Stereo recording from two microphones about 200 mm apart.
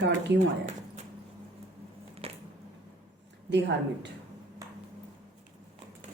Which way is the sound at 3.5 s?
60° right (ahead or behind).